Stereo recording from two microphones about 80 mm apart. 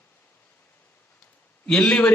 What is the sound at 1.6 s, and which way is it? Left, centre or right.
Speech, centre.